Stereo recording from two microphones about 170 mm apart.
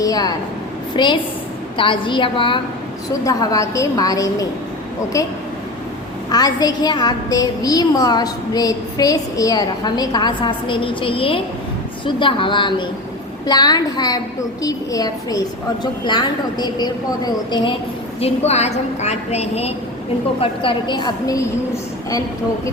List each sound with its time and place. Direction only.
0.0 s a sound: 20° left (ahead or behind)
0.9 s a woman's voice: 25° left (ahead or behind)
3.2 s a woman's voice: 20° left (ahead or behind)
6.3 s a woman's voice: 25° left (ahead or behind)
18.2 s a woman's voice: 40° left (ahead or behind); by 21.4 s 25° left (ahead or behind)